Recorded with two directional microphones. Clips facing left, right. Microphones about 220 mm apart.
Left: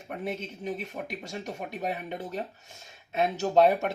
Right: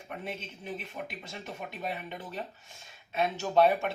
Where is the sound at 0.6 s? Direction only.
45° left (ahead or behind).